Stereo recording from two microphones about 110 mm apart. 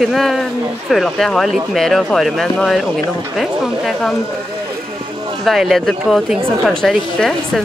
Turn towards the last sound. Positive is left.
turn(degrees=0)  # may be behind; listen again after turning